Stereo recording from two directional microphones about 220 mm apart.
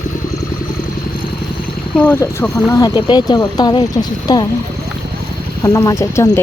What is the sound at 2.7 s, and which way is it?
Speech, 15° left (ahead or behind).